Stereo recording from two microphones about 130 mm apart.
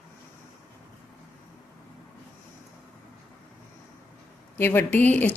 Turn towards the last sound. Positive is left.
turn(degrees=15)  # may be behind; listen again after turning